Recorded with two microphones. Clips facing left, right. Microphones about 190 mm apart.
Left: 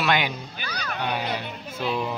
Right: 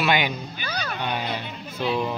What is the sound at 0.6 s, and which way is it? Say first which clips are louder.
Music: right 3 dB; 25° right (ahead or behind).